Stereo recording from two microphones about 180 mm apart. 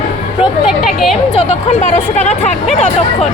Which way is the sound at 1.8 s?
40° left (ahead or behind).